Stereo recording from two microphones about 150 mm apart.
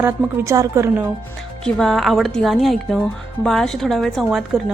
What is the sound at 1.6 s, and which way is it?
A woman's voice, 5° left (ahead or behind).